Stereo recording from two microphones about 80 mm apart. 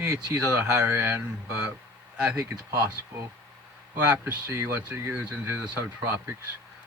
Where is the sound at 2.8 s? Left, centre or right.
Right.